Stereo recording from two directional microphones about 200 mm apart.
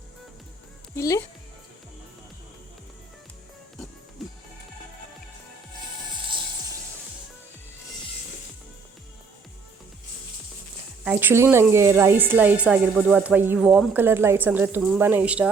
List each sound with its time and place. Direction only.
0.9 s speech: 15° left (ahead or behind)
4.2 s music: centre (ahead or behind)
11.0 s speech: 10° right (ahead or behind)